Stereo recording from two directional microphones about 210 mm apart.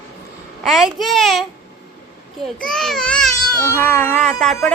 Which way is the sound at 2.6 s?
Centre (ahead or behind).